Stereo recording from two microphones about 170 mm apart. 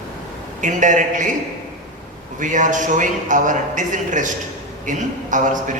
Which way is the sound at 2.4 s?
50° right (ahead or behind).